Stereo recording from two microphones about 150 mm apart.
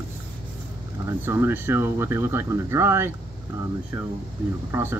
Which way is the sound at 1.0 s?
15° right (ahead or behind).